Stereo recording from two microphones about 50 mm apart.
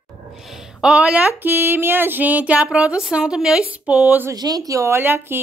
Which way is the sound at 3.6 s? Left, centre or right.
Right.